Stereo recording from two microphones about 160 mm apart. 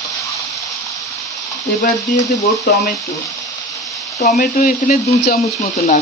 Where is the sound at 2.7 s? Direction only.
65° left (ahead or behind).